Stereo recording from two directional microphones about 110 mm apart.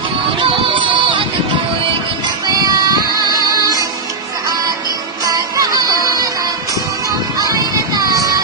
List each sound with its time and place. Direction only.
0.4 s music: 50° right (ahead or behind)
2.5 s music: 35° right (ahead or behind)
5.2 s music: 35° right (ahead or behind)